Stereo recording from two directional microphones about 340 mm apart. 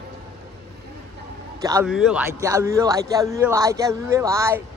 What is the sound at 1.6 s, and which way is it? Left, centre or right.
A man's voice, centre.